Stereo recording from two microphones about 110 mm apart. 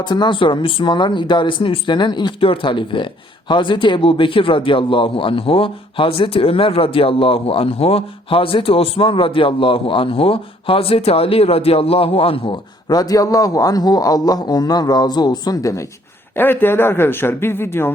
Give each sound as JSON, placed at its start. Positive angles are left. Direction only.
{"t": 0.0, "sound": "a man's voice", "side_deg": 45}
{"t": 12.9, "sound": "a man's voice", "side_deg": 35}
{"t": 16.3, "sound": "speech", "side_deg": 20}